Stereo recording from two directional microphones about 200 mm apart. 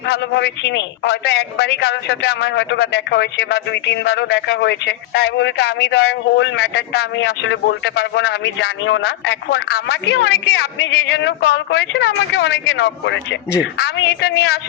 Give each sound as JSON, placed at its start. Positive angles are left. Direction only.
{"t": 0.0, "sound": "a man's voice", "side_deg": 60}